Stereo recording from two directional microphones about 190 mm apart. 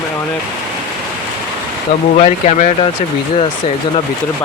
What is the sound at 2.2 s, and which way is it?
Speech, 40° left (ahead or behind).